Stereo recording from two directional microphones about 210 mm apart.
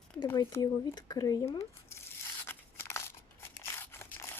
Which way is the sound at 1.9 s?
10° left (ahead or behind).